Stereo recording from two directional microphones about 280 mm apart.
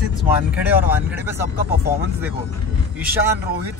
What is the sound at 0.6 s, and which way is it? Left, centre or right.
Speech, centre.